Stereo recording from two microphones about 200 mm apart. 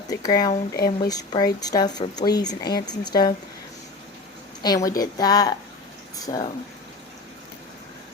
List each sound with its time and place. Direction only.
0.1 s speech: 20° left (ahead or behind)
4.6 s speech: 20° left (ahead or behind)